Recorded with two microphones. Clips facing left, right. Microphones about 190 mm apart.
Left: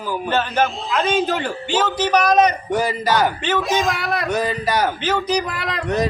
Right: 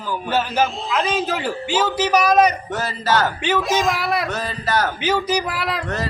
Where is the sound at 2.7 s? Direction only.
15° left (ahead or behind).